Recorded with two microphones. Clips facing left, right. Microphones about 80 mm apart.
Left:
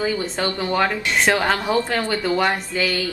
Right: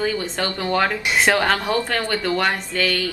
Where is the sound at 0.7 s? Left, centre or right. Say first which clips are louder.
Right 1 dB; centre.